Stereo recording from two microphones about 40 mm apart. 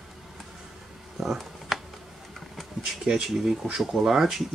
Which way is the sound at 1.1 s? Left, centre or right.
Centre.